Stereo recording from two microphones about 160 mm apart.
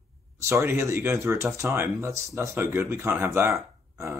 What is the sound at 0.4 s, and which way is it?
Speech, 15° right (ahead or behind).